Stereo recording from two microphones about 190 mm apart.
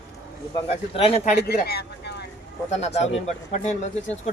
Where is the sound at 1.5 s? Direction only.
55° left (ahead or behind).